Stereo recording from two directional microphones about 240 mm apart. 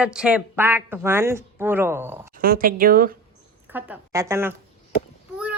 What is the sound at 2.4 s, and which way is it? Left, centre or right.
Speech, right.